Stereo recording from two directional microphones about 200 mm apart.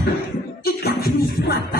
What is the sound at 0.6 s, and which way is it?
Beatboxing, 50° left (ahead or behind).